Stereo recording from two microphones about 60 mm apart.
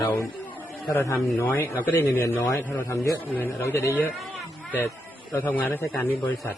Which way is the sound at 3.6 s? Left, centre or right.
Left.